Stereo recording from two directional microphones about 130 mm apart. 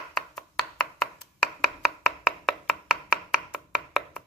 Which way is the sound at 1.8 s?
Centre (ahead or behind).